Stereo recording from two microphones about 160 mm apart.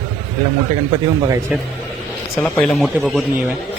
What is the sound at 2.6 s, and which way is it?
Speech, centre (ahead or behind).